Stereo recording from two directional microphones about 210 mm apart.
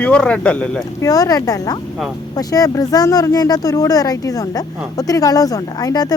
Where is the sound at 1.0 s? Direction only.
15° left (ahead or behind).